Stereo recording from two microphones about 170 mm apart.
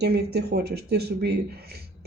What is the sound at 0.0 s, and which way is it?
Speech, 70° right (ahead or behind).